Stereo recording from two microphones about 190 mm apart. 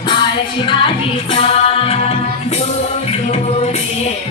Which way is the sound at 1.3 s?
30° left (ahead or behind).